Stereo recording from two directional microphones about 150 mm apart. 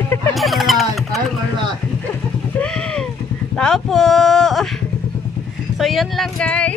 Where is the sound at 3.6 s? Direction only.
5° left (ahead or behind).